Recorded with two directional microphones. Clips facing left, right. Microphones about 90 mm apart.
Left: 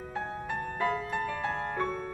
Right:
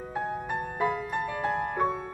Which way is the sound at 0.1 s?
15° right (ahead or behind).